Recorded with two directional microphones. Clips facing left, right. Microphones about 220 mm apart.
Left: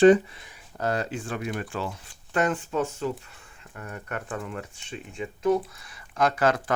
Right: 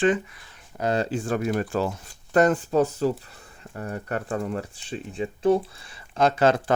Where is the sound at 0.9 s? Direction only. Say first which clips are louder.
Right 7 dB; 30° right (ahead or behind).